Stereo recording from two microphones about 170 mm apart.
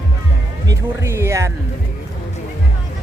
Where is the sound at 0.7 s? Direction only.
15° right (ahead or behind).